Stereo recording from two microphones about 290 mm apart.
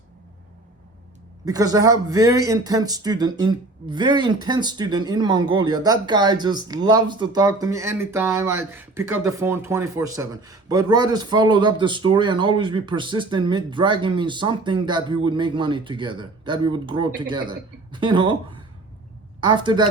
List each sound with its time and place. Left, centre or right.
1.5 s speech: centre